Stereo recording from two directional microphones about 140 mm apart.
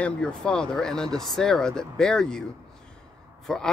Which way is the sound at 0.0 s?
5° left (ahead or behind).